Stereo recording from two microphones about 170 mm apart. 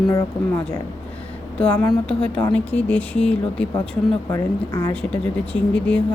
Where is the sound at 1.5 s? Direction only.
5° left (ahead or behind).